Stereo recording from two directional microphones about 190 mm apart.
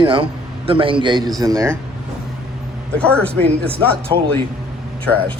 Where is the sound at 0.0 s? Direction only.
25° right (ahead or behind).